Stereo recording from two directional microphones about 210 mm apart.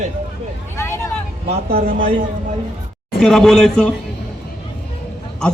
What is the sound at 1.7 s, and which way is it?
Speech, 40° right (ahead or behind).